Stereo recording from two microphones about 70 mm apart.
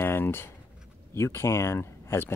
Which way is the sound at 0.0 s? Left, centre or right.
Left.